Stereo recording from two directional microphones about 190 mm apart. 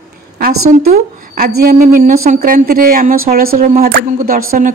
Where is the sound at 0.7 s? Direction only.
40° right (ahead or behind).